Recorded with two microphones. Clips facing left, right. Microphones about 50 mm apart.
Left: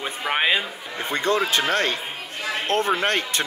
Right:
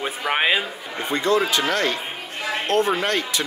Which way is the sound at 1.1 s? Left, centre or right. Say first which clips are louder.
Right 2 dB; left.